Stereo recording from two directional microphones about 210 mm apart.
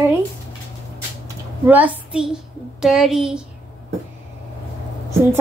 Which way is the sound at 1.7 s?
5° right (ahead or behind).